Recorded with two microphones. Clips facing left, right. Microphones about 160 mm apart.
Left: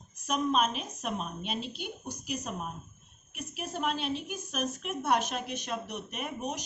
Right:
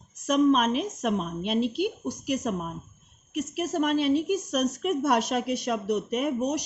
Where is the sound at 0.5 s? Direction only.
75° right (ahead or behind).